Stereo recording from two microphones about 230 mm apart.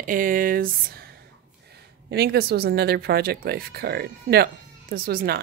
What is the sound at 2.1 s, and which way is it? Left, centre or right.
Speech, right.